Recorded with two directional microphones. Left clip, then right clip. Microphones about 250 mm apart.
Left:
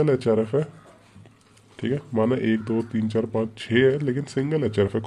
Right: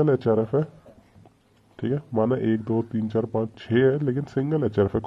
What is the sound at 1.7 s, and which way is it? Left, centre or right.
Speech, centre.